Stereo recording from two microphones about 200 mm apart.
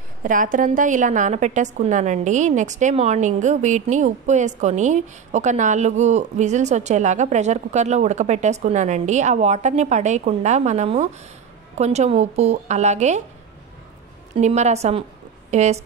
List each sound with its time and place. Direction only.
0.2 s a woman's voice: 40° right (ahead or behind)
14.3 s a woman's voice: 35° right (ahead or behind)